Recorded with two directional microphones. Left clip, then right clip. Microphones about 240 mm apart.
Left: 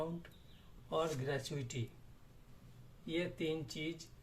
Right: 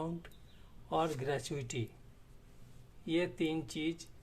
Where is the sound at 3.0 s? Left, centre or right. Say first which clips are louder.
Right 5 dB; right.